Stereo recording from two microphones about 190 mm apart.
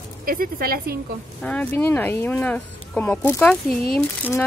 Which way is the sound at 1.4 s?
5° left (ahead or behind).